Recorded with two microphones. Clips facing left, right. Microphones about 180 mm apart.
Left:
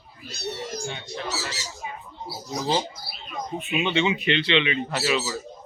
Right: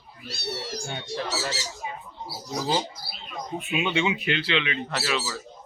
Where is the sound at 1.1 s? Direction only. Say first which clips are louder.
Right 5 dB; 35° right (ahead or behind).